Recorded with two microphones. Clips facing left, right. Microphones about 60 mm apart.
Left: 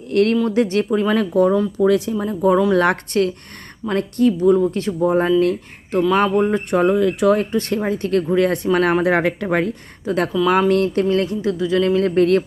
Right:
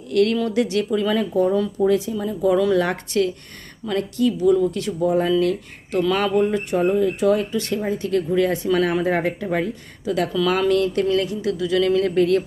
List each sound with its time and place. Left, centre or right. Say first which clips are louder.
0.1 s speech: left 2 dB; left
1.8 s speech: left 3 dB; left
2.1 s speech: left 3 dB; left
2.7 s speech: left 3 dB; left
6.7 s speech: left 3 dB; left
7.3 s speech: left 3 dB; left
10.3 s speech: left 3 dB; centre
10.7 s speech: left 2 dB; left